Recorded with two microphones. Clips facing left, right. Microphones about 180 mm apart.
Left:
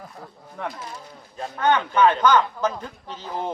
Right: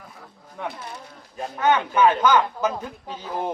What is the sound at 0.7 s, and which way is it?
Speech, 65° right (ahead or behind).